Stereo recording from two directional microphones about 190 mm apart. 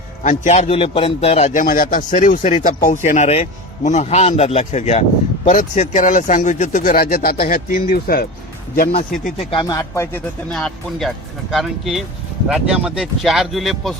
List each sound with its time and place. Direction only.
0.2 s a man's voice: 40° left (ahead or behind)
9.4 s speech: 25° left (ahead or behind)
10.5 s speech: centre (ahead or behind)